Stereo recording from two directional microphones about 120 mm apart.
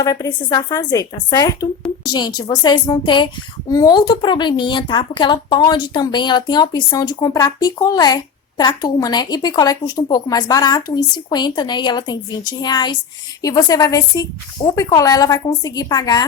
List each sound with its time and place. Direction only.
0.0 s a woman's voice: 30° left (ahead or behind)